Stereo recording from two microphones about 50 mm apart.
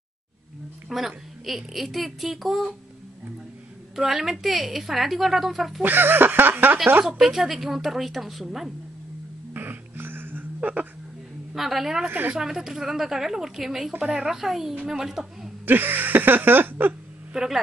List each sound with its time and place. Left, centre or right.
0.8 s a woman's voice: centre
3.9 s a woman's voice: centre
5.8 s a sound: right
7.1 s a woman's voice: centre
9.5 s music: right
10.6 s speech: right
11.5 s a woman's voice: centre
12.1 s speech: right
12.4 s a woman's voice: centre
13.9 s a woman's voice: right
14.2 s a woman's voice: centre
15.6 s a sound: right
17.3 s speech: centre